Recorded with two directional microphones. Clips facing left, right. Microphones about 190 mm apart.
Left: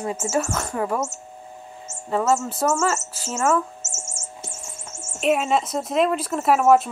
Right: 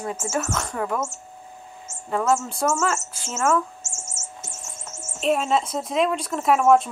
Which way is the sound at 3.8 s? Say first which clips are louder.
Left 1 dB; 30° left (ahead or behind).